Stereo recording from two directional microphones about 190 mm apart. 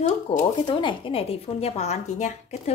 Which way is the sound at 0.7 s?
25° left (ahead or behind).